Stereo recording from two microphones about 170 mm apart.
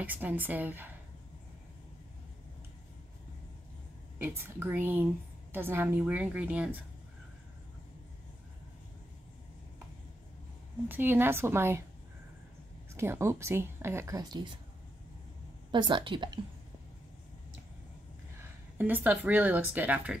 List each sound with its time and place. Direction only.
0.0 s a woman's voice: 10° right (ahead or behind)
4.2 s a woman's voice: 15° right (ahead or behind)
10.9 s a woman's voice: 10° right (ahead or behind)
12.9 s a woman's voice: 15° right (ahead or behind)
15.7 s a woman's voice: 30° right (ahead or behind)
18.4 s speech: 10° right (ahead or behind)